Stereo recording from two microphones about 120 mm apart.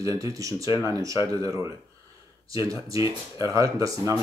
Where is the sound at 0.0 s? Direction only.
25° right (ahead or behind).